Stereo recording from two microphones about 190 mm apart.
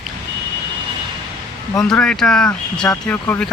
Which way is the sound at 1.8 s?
5° left (ahead or behind).